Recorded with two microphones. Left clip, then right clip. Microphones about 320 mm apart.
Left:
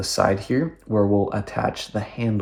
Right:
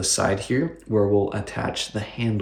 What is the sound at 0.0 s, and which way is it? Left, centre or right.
Speech, centre.